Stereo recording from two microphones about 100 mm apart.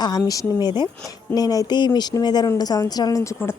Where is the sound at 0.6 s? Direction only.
50° left (ahead or behind).